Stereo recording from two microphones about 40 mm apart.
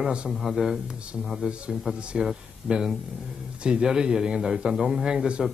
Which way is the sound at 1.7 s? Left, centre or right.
Centre.